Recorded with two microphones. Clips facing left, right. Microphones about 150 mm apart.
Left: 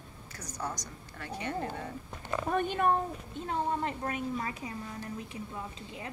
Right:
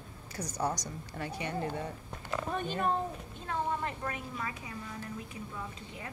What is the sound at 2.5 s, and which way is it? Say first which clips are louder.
Speech: left 5 dB; 55° left (ahead or behind).